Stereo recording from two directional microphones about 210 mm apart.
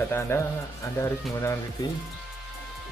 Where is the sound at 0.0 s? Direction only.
10° left (ahead or behind).